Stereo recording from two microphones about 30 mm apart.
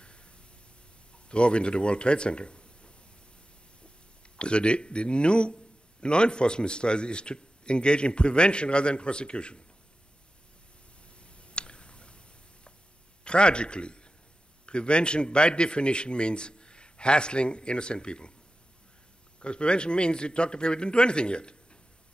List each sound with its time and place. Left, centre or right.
0.0 s a sound: left
1.1 s speech: left
4.4 s a man's voice: left
11.2 s a sound: left
13.2 s a man's voice: left
19.4 s a man's voice: left